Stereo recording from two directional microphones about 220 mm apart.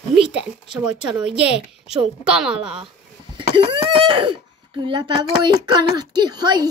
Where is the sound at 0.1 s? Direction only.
5° right (ahead or behind).